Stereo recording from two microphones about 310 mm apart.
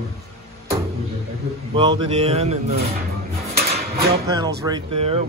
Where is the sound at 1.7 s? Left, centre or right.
Centre.